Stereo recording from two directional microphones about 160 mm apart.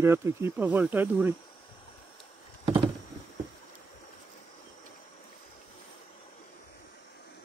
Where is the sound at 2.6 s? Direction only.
35° right (ahead or behind).